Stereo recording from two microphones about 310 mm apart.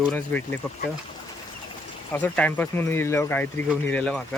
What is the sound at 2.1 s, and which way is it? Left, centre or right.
Speech, centre.